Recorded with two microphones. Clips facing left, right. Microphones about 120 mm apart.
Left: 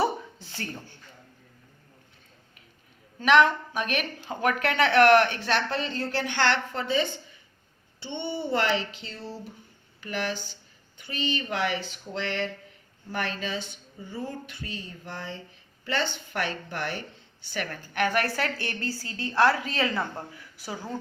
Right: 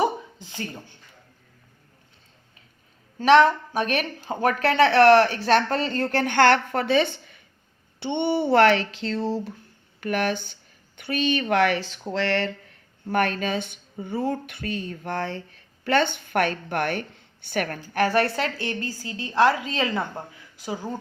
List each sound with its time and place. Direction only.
0.0 s a sound: 15° right (ahead or behind)
3.2 s a woman's voice: 35° right (ahead or behind); by 9.4 s 90° right
10.0 s speech: 60° right (ahead or behind); by 12.5 s 75° right (ahead or behind)
13.1 s speech: 55° right (ahead or behind)
17.9 s a woman's voice: 35° right (ahead or behind); by 21.0 s 15° right (ahead or behind)